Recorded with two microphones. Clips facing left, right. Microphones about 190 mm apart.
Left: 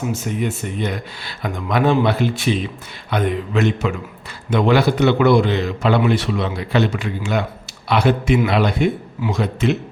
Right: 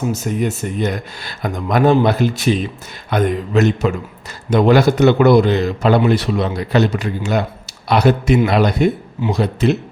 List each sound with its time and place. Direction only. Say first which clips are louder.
0.1 s a man's voice: right 3 dB; 40° right (ahead or behind)